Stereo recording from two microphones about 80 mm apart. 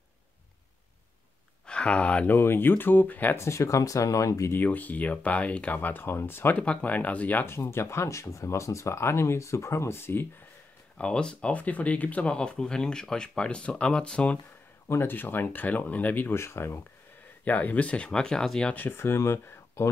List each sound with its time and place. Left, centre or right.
1.7 s speech: centre
2.3 s speech: left
3.3 s speech: left
4.5 s speech: left
6.5 s speech: centre
11.0 s speech: centre
14.9 s speech: left
17.5 s speech: left
18.7 s speech: left
18.9 s speech: left